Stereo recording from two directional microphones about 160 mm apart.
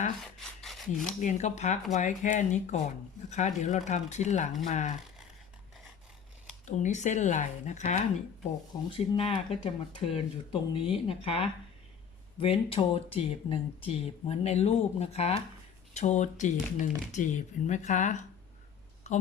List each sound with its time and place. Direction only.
0.2 s rub: centre (ahead or behind)
1.2 s speech: 50° left (ahead or behind)
6.7 s speech: 50° left (ahead or behind)